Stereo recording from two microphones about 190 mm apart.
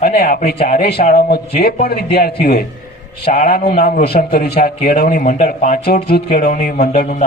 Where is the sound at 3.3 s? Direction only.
45° left (ahead or behind).